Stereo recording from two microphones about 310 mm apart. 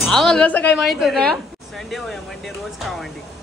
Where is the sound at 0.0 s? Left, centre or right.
Centre.